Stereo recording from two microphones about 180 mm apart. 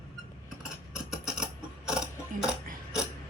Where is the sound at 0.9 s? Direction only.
5° right (ahead or behind).